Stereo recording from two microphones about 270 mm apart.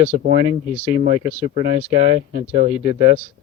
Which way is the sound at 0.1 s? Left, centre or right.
Right.